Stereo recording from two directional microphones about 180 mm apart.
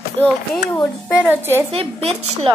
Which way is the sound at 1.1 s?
10° right (ahead or behind).